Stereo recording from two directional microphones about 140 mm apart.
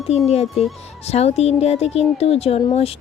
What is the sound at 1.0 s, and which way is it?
Speech, 50° left (ahead or behind).